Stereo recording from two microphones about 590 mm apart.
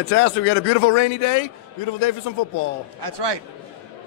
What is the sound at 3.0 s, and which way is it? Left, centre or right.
Speech, right.